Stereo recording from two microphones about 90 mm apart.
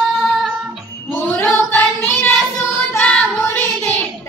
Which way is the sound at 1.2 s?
20° left (ahead or behind).